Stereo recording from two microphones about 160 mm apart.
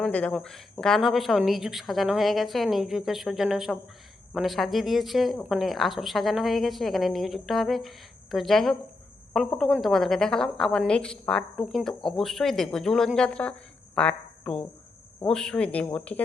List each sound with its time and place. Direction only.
0.0 s a woman's voice: 5° left (ahead or behind)